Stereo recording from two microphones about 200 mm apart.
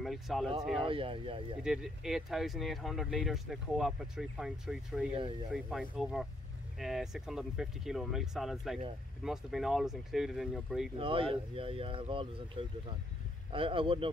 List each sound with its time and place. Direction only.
0.0 s speech: centre (ahead or behind)
0.8 s speech: 25° right (ahead or behind)
1.6 s speech: 5° right (ahead or behind)
11.0 s speech: 25° right (ahead or behind)